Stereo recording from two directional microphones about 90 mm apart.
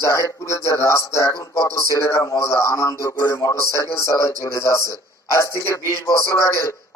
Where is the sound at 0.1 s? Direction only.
35° left (ahead or behind).